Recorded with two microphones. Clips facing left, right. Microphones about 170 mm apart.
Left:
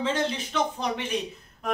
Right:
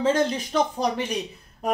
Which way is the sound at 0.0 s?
45° right (ahead or behind).